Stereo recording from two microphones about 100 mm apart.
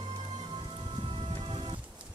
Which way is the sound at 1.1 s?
70° right (ahead or behind).